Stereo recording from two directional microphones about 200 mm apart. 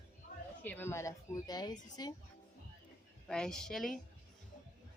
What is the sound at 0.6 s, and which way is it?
Speech, 10° left (ahead or behind).